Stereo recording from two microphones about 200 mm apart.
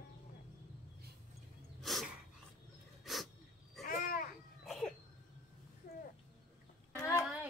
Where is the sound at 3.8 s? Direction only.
45° left (ahead or behind).